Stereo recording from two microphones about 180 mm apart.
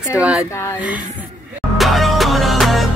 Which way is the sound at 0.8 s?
10° right (ahead or behind).